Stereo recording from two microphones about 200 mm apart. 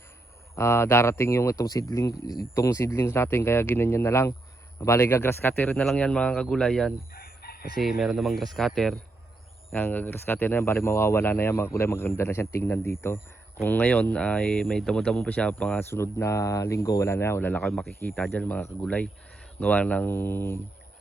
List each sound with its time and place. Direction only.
0.5 s speech: 15° left (ahead or behind)
7.1 s chicken: 50° left (ahead or behind)
7.8 s speech: centre (ahead or behind)